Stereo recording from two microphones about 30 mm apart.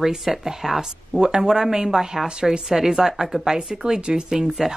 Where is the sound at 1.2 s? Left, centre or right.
Right.